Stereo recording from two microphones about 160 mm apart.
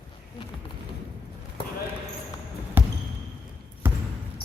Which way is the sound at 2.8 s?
10° right (ahead or behind).